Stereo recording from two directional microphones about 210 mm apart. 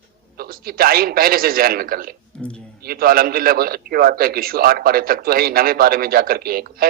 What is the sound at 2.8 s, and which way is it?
A man's voice, 45° right (ahead or behind).